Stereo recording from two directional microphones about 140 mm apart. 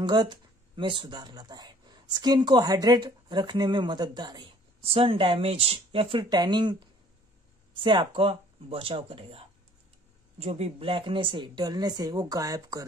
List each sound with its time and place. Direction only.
0.0 s speech: 30° right (ahead or behind)